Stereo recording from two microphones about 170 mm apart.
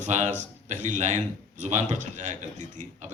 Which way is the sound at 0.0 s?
45° right (ahead or behind).